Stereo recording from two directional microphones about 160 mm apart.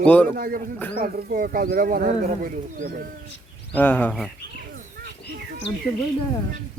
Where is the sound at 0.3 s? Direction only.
65° right (ahead or behind).